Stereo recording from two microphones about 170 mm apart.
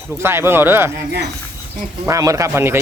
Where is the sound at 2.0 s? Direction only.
20° right (ahead or behind).